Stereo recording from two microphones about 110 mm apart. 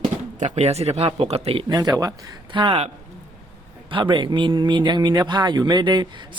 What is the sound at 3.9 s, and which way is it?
Speech, 45° right (ahead or behind).